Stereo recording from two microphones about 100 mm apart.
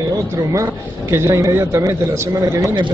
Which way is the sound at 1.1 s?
30° right (ahead or behind).